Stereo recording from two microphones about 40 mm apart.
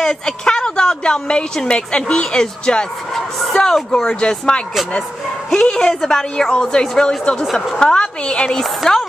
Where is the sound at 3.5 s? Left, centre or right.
Centre.